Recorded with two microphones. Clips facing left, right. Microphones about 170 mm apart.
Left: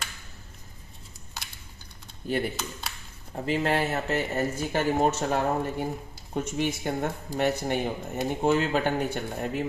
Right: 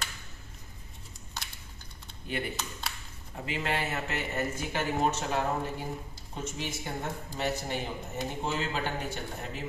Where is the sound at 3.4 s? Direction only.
40° left (ahead or behind); by 9.2 s 55° left (ahead or behind).